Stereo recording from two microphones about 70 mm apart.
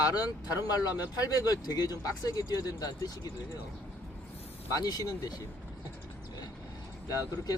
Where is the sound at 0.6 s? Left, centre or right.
Left.